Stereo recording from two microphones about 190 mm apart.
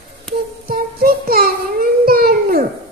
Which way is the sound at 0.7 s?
50° right (ahead or behind).